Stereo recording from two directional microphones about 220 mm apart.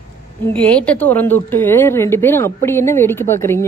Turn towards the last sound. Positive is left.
turn(degrees=10)  # may be behind; listen again after turning